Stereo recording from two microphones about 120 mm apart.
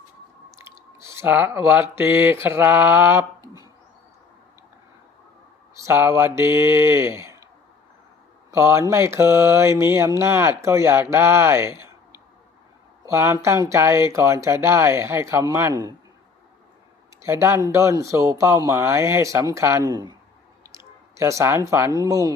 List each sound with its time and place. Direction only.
0.5 s speech: 25° right (ahead or behind)
5.8 s speech: 20° right (ahead or behind)
8.4 s speech: 20° right (ahead or behind)
17.2 s speech: 25° right (ahead or behind)